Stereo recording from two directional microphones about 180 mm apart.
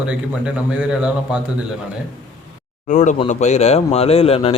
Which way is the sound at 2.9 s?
40° left (ahead or behind).